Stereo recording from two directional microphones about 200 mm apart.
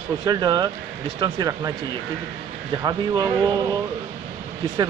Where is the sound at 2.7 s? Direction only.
20° right (ahead or behind).